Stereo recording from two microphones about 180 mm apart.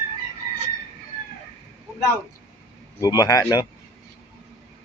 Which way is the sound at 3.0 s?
20° left (ahead or behind).